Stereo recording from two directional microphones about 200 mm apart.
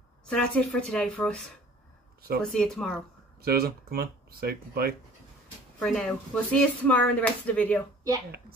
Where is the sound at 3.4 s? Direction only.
50° right (ahead or behind).